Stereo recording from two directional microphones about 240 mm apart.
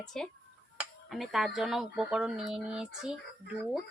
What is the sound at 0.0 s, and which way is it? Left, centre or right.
Speech, centre.